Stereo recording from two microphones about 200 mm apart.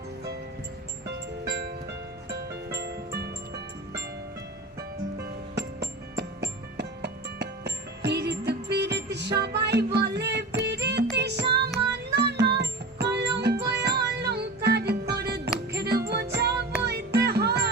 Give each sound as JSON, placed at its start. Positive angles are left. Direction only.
{"t": 1.0, "sound": "music", "side_deg": -55}
{"t": 5.2, "sound": "music", "side_deg": -55}